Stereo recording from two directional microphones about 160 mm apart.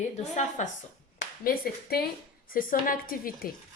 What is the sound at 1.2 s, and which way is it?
Speech, 65° left (ahead or behind).